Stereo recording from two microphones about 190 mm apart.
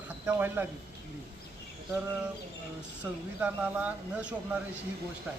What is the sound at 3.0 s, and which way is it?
Speech, 5° right (ahead or behind).